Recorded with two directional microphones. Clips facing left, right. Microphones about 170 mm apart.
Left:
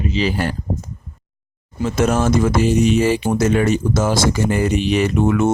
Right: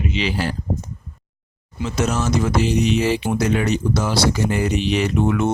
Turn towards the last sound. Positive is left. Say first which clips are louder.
# left 3 dB
turn(degrees=45)  # may be behind; listen again after turning